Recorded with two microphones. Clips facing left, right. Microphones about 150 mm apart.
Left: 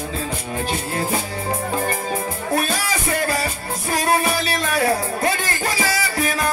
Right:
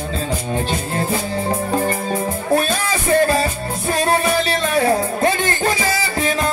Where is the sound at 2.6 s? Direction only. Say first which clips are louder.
Right 3 dB; 25° right (ahead or behind).